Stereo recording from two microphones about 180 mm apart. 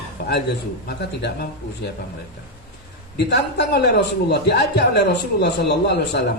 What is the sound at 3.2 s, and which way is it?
A man's voice, 65° left (ahead or behind).